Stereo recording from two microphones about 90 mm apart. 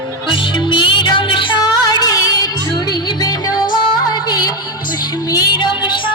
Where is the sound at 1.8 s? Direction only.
40° left (ahead or behind).